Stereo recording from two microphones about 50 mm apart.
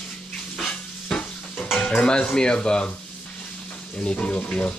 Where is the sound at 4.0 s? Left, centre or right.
Left.